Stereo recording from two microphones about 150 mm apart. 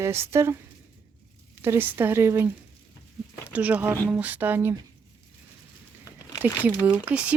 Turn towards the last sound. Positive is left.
turn(degrees=-10)  # may be behind; listen again after turning